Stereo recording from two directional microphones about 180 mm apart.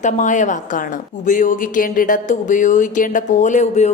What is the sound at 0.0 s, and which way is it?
A woman's voice, 45° left (ahead or behind).